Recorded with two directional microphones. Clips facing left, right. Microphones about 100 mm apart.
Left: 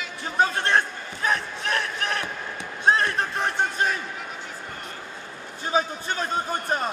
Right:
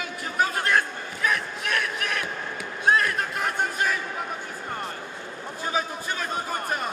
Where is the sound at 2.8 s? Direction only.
30° left (ahead or behind).